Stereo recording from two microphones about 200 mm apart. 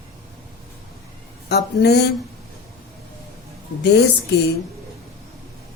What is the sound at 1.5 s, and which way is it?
Speech, 55° left (ahead or behind).